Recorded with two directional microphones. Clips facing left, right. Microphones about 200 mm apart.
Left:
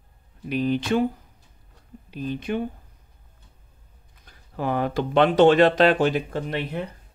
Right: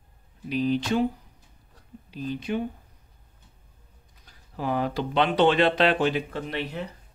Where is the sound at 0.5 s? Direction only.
55° left (ahead or behind).